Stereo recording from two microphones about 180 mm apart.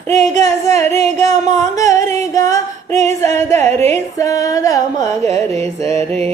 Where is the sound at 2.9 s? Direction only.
40° right (ahead or behind).